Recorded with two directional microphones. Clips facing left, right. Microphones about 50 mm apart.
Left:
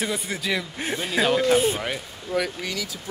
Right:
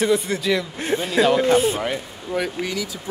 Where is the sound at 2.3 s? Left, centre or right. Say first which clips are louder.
Right 2 dB; right.